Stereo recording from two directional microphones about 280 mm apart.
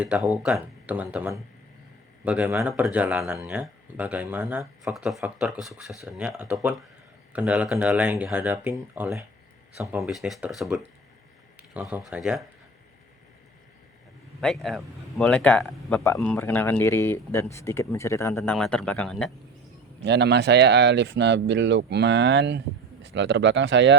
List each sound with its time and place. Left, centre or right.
0.0 s speech: centre
14.4 s speech: centre
20.1 s speech: right